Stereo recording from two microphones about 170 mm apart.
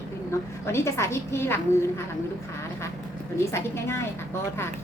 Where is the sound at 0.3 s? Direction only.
15° left (ahead or behind).